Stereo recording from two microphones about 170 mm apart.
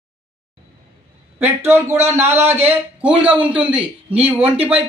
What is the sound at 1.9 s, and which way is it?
Speech, 40° right (ahead or behind).